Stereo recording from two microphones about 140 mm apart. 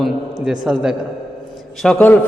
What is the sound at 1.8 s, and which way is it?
Speech, 10° left (ahead or behind).